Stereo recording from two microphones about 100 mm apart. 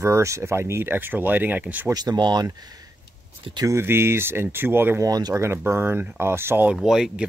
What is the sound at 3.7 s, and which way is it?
Speech, 25° right (ahead or behind).